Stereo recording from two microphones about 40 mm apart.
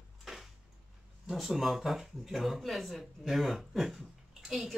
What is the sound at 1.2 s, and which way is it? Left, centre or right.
Speech, centre.